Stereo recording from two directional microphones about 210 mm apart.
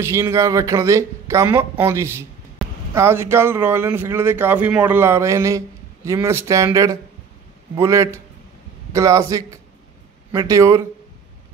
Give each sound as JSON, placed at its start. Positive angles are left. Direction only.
{"t": 0.0, "sound": "speech", "side_deg": -15}